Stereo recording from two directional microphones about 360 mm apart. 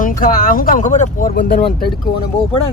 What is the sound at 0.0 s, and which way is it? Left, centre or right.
Speech, left.